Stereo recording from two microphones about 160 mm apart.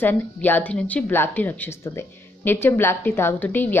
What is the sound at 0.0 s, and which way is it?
A woman's voice, 10° left (ahead or behind).